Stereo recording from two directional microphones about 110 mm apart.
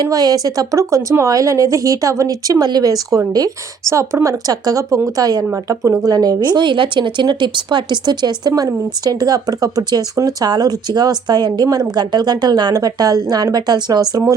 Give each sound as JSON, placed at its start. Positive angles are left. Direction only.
{"t": 0.1, "sound": "speech", "side_deg": -35}